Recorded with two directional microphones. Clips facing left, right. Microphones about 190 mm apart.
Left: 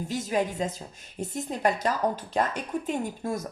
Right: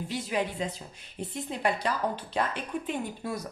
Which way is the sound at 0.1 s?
45° left (ahead or behind).